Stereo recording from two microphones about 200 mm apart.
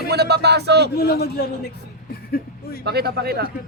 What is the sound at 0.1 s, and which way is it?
Speech, 55° right (ahead or behind).